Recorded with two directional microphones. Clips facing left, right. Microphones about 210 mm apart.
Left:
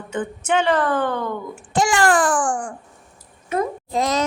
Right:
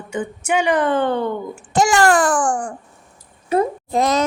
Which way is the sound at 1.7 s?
40° right (ahead or behind).